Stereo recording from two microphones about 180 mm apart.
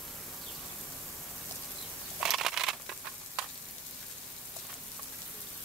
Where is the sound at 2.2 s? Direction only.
Centre (ahead or behind).